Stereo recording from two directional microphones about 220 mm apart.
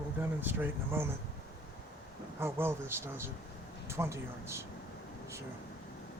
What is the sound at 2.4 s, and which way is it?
Speech, 10° right (ahead or behind).